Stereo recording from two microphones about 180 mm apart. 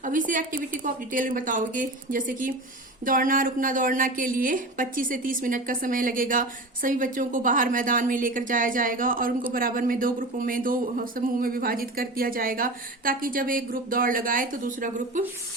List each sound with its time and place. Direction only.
0.0 s speech: 45° right (ahead or behind)